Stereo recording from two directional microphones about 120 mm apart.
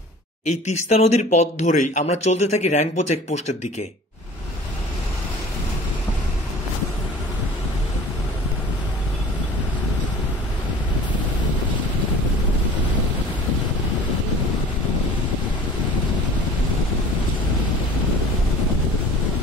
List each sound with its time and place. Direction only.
0.5 s speech: 75° left (ahead or behind)